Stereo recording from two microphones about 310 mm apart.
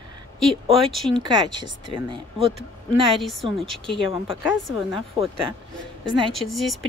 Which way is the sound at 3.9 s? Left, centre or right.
Centre.